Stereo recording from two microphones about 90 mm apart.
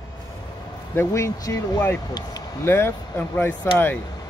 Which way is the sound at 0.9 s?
30° left (ahead or behind).